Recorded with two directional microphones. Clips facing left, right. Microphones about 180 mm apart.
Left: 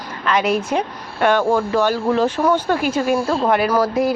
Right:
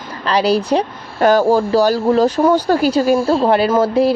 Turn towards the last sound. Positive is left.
turn(degrees=-30)  # may be behind; listen again after turning